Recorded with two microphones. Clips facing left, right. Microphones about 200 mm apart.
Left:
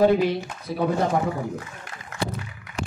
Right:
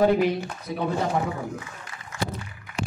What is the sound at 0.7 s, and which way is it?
Speech, 35° left (ahead or behind).